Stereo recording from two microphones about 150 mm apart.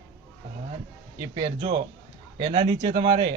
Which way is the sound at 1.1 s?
30° right (ahead or behind).